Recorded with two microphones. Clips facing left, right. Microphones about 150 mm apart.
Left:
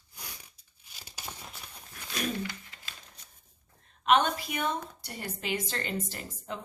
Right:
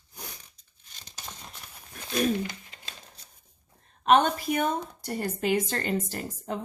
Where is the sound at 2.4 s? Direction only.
25° right (ahead or behind).